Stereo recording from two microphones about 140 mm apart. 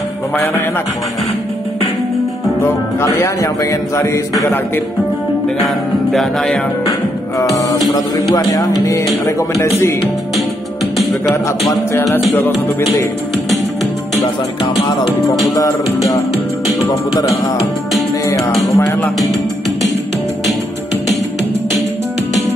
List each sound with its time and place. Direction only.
2.6 s speech: 20° left (ahead or behind)
6.1 s music: 5° left (ahead or behind)
7.3 s music: 25° left (ahead or behind)
8.5 s speech: 20° left (ahead or behind)
15.5 s speech: 20° left (ahead or behind)
18.8 s speech: 15° left (ahead or behind)